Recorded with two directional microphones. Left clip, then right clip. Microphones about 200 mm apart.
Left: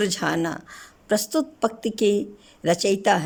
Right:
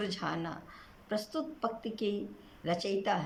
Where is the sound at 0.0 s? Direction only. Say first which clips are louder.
Left 13 dB; 55° left (ahead or behind).